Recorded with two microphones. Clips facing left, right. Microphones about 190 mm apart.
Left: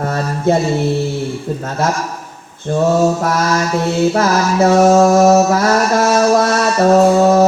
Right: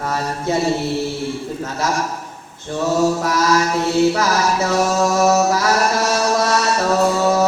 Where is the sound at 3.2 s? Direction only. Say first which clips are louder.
Left 1 dB; 55° left (ahead or behind).